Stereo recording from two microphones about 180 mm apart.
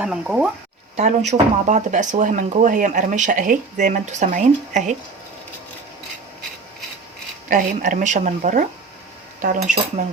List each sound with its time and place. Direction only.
0.0 s speech: 5° right (ahead or behind)
0.9 s speech: 35° right (ahead or behind)
7.4 s speech: 45° right (ahead or behind)